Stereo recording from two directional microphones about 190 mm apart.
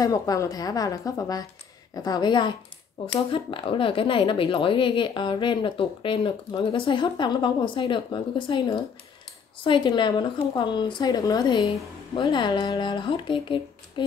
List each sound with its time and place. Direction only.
0.0 s speech: 15° left (ahead or behind)